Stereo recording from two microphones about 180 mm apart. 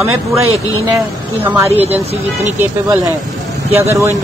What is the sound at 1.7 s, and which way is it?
Speech, 35° right (ahead or behind).